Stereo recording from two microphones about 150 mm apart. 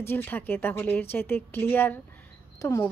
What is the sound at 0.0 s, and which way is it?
A woman's voice, 15° left (ahead or behind).